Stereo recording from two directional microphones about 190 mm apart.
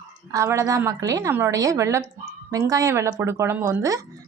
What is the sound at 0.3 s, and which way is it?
Speech, 15° right (ahead or behind).